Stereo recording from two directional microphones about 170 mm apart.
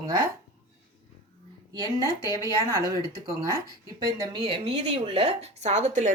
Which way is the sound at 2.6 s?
20° right (ahead or behind).